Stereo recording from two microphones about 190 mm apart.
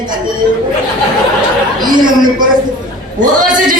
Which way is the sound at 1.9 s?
20° right (ahead or behind).